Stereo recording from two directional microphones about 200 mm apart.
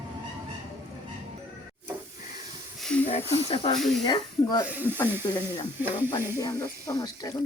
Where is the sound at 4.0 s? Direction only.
20° left (ahead or behind).